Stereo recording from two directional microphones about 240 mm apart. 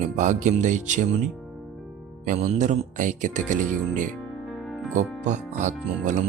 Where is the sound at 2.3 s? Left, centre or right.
Right.